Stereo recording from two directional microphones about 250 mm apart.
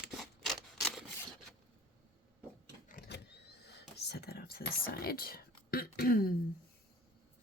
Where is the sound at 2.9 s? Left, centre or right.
Left.